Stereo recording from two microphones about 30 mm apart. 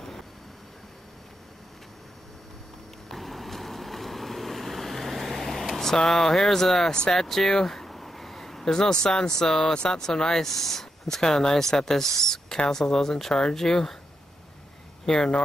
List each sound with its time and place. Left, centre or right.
3.1 s vehicle: centre
6.0 s speech: centre
7.6 s a sound: centre
8.6 s speech: left
15.0 s speech: left